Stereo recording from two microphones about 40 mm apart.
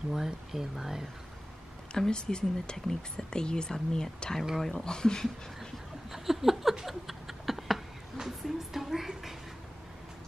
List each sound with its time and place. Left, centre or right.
0.1 s speech: centre
2.0 s speech: centre
4.8 s speech: centre
6.1 s a sound: centre